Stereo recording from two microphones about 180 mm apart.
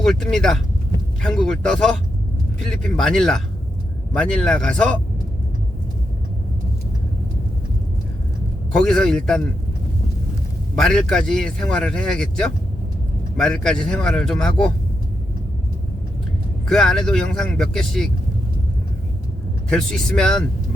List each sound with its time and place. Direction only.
0.0 s speech: 5° left (ahead or behind)
8.7 s speech: 5° left (ahead or behind)
10.8 s speech: 5° left (ahead or behind)
16.6 s speech: centre (ahead or behind)
19.7 s speech: 5° left (ahead or behind)